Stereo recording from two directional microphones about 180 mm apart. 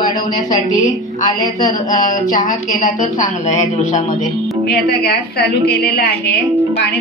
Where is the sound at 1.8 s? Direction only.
45° left (ahead or behind).